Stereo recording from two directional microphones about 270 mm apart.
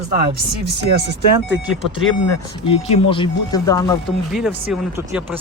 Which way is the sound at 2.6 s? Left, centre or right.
Left.